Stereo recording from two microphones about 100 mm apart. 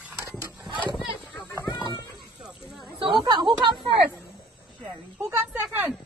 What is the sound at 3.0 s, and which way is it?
Chatter, 50° right (ahead or behind).